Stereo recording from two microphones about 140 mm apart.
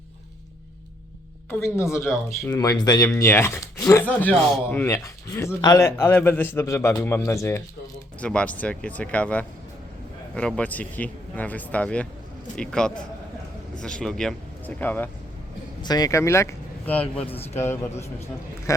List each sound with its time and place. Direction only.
1.5 s speech: 15° left (ahead or behind)
8.2 s speech: 10° left (ahead or behind)
15.8 s a man's voice: 30° left (ahead or behind); by 17.2 s 10° left (ahead or behind)
17.2 s a man's voice: 45° left (ahead or behind)